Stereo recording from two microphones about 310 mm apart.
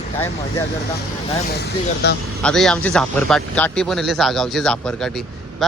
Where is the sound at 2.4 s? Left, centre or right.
Centre.